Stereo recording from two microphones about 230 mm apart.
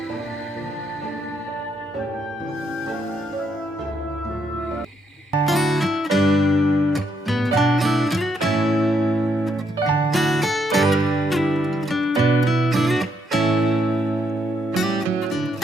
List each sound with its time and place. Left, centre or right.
5.5 s music: centre